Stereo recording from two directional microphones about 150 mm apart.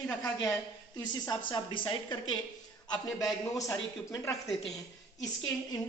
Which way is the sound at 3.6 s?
20° left (ahead or behind).